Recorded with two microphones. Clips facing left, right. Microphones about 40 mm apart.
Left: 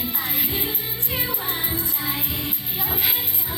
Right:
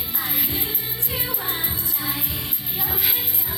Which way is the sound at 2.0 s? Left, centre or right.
Left.